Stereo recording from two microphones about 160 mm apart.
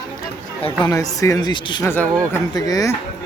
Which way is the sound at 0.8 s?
20° left (ahead or behind).